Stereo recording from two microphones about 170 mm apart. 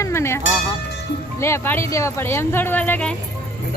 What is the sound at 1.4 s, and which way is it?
Speech, 15° left (ahead or behind).